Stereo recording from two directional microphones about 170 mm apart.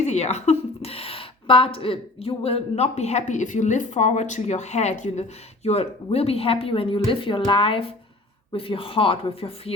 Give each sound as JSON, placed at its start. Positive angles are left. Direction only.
{"t": 0.0, "sound": "a woman's voice", "side_deg": 40}